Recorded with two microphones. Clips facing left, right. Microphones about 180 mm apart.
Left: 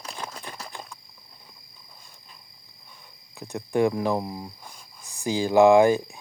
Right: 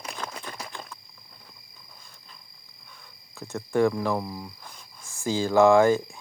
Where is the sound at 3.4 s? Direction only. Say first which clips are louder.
Even; 15° left (ahead or behind).